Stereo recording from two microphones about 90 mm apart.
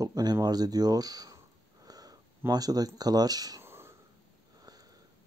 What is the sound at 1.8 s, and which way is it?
Sniff, 45° right (ahead or behind).